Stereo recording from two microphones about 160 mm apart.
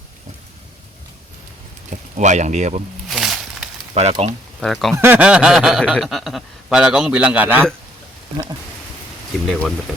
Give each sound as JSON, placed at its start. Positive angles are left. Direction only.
{"t": 2.1, "sound": "speech", "side_deg": -50}
{"t": 3.1, "sound": "a sound", "side_deg": 0}
{"t": 3.9, "sound": "speech", "side_deg": -40}
{"t": 4.6, "sound": "speech", "side_deg": 0}
{"t": 4.9, "sound": "speech", "side_deg": -10}
{"t": 9.5, "sound": "speech", "side_deg": 5}